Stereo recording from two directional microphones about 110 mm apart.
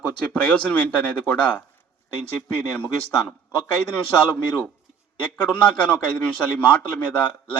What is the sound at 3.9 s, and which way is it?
A man's voice, 10° left (ahead or behind).